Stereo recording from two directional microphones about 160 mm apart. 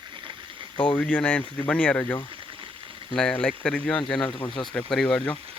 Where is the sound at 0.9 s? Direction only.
10° left (ahead or behind).